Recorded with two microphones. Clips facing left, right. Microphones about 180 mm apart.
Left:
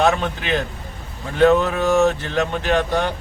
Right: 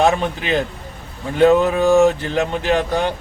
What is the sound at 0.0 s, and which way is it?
Speech, 15° right (ahead or behind).